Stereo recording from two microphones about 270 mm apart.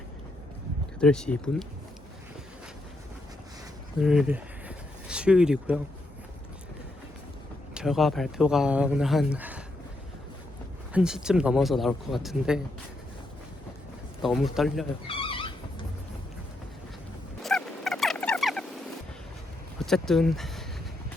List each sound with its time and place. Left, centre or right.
0.9 s speech: centre
4.0 s speech: centre
7.7 s speech: centre
10.9 s speech: centre
14.2 s speech: centre
15.0 s a sound: centre
17.4 s fowl: centre
19.8 s speech: centre